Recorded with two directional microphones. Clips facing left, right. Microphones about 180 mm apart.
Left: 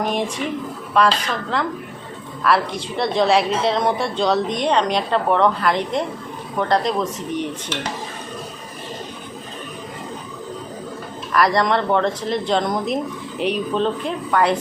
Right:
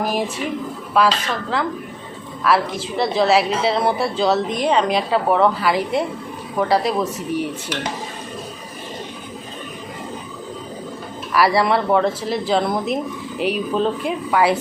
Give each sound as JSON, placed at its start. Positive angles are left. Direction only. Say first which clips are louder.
{"t": 0.0, "sound": "speech", "louder": "even", "side_deg": -5}
{"t": 11.3, "sound": "speech", "louder": "right 1 dB", "side_deg": -5}